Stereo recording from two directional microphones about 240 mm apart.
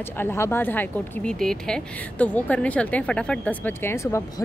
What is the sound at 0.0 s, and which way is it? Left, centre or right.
Speech, centre.